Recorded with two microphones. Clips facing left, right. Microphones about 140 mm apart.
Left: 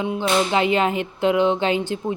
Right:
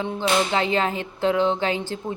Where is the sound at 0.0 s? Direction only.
15° left (ahead or behind).